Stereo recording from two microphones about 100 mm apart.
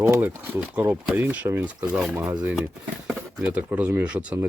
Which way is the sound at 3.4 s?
15° right (ahead or behind).